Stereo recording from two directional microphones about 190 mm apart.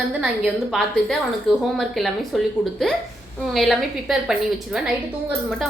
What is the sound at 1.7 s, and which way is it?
Speech, centre (ahead or behind).